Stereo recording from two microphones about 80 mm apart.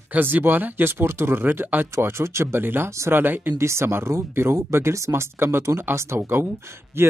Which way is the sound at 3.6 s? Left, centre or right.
Right.